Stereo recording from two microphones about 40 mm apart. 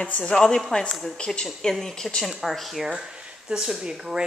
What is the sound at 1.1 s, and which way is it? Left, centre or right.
Speech, left.